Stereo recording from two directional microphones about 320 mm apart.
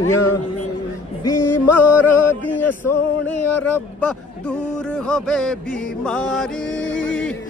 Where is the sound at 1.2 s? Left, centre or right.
Centre.